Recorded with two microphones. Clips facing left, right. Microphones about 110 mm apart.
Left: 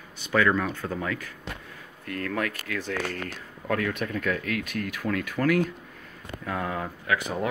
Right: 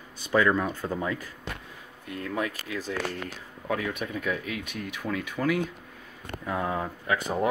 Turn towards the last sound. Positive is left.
turn(degrees=-30)  # may be behind; listen again after turning